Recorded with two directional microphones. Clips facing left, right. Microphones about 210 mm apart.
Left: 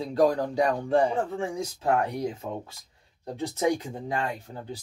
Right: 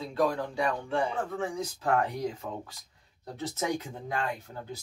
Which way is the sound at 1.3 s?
10° left (ahead or behind).